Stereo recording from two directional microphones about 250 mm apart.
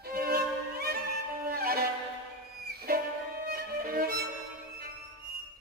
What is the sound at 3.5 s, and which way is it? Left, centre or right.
Violin, right.